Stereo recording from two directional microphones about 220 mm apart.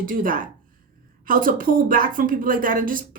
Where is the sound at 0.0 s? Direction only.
40° right (ahead or behind).